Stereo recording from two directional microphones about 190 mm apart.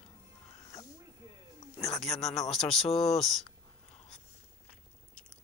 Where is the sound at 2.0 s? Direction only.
Centre (ahead or behind).